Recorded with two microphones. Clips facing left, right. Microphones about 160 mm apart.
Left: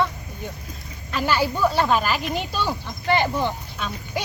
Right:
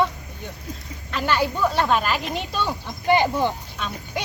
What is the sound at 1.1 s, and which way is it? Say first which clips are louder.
Speech: even; centre (ahead or behind).